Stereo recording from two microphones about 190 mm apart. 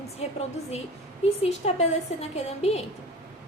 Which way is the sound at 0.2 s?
35° left (ahead or behind).